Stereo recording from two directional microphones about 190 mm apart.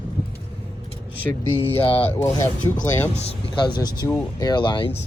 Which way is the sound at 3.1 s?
30° left (ahead or behind).